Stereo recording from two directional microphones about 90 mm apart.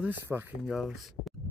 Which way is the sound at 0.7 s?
5° right (ahead or behind).